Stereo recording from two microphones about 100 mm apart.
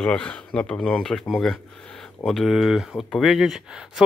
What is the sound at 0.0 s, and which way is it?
Speech, 10° left (ahead or behind).